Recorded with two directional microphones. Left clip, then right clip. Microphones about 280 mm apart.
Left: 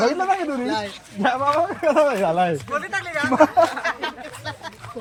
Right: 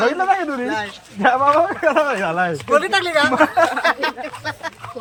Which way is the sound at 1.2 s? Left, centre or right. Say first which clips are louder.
Right 5 dB; centre.